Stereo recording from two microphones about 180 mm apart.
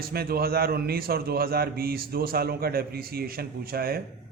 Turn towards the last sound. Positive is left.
turn(degrees=-55)  # may be behind; listen again after turning